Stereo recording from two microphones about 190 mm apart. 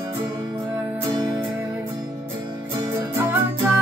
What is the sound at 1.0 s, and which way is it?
Music, 20° right (ahead or behind).